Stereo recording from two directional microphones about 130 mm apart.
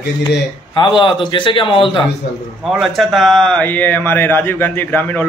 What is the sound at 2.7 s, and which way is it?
Speech, centre (ahead or behind).